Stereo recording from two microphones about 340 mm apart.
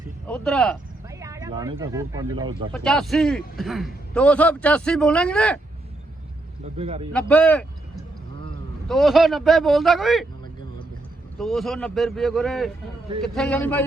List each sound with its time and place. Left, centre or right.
0.3 s a man's voice: centre
1.2 s a sound: centre
1.8 s speech: centre
2.7 s a man's voice: centre
6.7 s speech: centre
7.1 s a man's voice: centre
8.9 s a man's voice: centre
11.3 s a man's voice: centre